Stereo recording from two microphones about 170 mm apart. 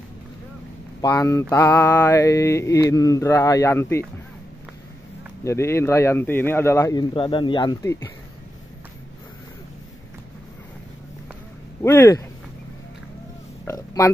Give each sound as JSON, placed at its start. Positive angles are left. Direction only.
{"t": 1.0, "sound": "mantra", "side_deg": 20}
{"t": 5.4, "sound": "mantra", "side_deg": 15}
{"t": 11.8, "sound": "mantra", "side_deg": 15}
{"t": 13.7, "sound": "oink", "side_deg": 20}